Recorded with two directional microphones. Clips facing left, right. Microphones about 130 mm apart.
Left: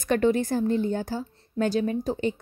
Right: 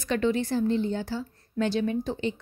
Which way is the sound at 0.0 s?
50° left (ahead or behind).